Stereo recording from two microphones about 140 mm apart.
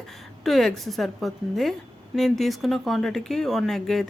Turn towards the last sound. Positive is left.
turn(degrees=0)  # may be behind; listen again after turning